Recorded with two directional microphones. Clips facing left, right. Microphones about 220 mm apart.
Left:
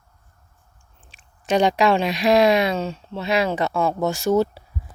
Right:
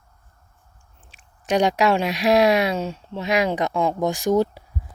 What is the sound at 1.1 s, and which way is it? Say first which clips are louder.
Speech: left 1 dB; 10° right (ahead or behind).